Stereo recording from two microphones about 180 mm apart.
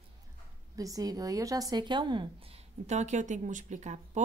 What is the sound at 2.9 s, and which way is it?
Speech, 40° right (ahead or behind).